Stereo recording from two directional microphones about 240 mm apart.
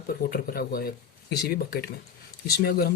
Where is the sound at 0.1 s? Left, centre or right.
Left.